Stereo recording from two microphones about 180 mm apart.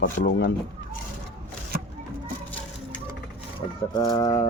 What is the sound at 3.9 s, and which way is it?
Speech, 25° left (ahead or behind).